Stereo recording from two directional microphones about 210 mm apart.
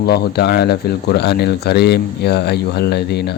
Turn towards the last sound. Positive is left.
turn(degrees=50)  # may be behind; listen again after turning